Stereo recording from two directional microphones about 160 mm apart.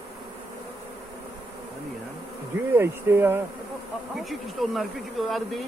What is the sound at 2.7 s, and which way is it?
Speech, 15° right (ahead or behind).